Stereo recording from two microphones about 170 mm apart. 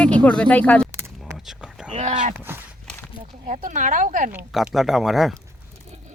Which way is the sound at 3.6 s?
50° right (ahead or behind).